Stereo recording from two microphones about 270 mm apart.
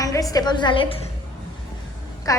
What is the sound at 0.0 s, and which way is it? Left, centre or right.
Speech, centre.